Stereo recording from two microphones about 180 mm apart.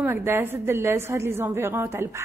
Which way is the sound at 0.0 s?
15° right (ahead or behind).